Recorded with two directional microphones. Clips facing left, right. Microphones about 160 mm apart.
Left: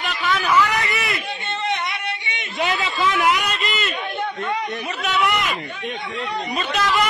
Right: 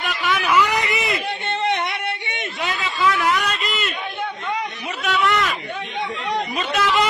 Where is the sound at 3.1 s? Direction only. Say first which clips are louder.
Even; 20° left (ahead or behind).